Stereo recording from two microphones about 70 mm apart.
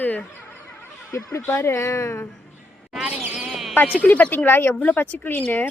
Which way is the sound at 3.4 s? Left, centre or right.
Centre.